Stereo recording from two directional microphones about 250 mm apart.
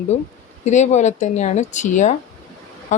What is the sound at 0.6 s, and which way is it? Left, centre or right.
Speech, left.